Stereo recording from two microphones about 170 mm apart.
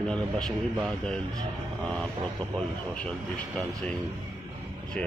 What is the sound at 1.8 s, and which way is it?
A man's voice, 5° left (ahead or behind).